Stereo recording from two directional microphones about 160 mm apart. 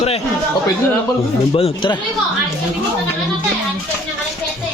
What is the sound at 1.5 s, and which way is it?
Speech, 35° left (ahead or behind).